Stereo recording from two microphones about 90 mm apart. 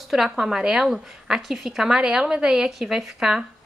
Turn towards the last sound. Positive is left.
turn(degrees=-10)  # may be behind; listen again after turning